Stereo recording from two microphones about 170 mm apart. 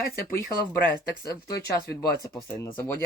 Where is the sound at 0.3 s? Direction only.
15° left (ahead or behind).